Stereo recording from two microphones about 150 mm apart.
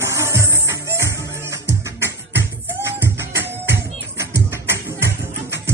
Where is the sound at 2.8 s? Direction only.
15° right (ahead or behind).